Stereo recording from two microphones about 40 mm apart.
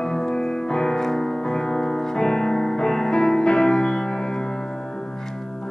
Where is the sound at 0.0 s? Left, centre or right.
Centre.